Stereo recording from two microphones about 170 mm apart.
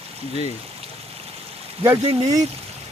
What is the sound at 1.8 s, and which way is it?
Speech, 20° right (ahead or behind).